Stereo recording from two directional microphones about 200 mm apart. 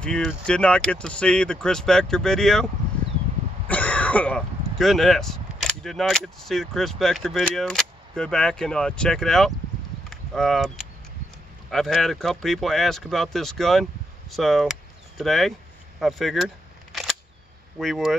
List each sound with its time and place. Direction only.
0.0 s speech: 5° left (ahead or behind)
10.0 s a sound: centre (ahead or behind)
11.7 s speech: centre (ahead or behind)
16.0 s single-lens reflex camera: centre (ahead or behind)
17.7 s speech: centre (ahead or behind)